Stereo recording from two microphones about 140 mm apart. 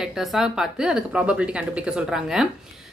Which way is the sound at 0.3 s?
Centre (ahead or behind).